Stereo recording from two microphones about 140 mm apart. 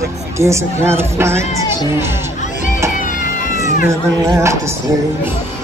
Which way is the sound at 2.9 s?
70° left (ahead or behind).